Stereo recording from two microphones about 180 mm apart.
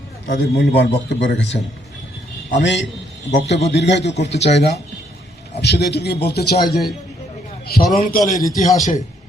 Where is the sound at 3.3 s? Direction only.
75° left (ahead or behind); by 7.8 s 55° left (ahead or behind).